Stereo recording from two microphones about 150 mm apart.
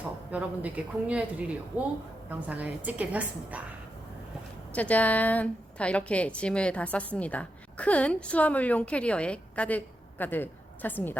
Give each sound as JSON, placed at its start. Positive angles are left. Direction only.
{"t": 0.3, "sound": "speech", "side_deg": -10}
{"t": 4.7, "sound": "a woman's voice", "side_deg": 10}